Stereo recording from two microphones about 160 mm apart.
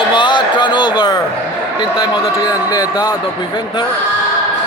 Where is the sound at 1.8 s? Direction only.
25° left (ahead or behind).